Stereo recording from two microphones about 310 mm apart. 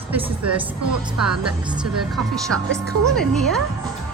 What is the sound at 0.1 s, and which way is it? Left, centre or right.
A woman's voice, centre.